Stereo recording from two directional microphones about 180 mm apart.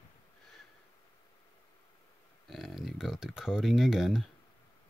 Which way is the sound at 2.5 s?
Centre (ahead or behind).